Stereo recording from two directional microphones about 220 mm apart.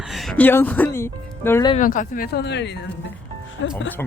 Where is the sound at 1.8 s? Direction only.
35° left (ahead or behind); by 3.7 s 60° left (ahead or behind).